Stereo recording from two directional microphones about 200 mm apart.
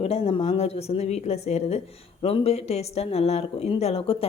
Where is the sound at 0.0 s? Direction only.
30° left (ahead or behind).